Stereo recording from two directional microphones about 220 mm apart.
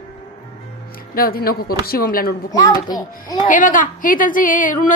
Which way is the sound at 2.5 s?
15° left (ahead or behind).